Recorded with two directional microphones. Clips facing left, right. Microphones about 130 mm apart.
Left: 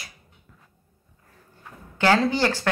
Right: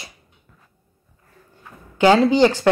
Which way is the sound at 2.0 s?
15° right (ahead or behind).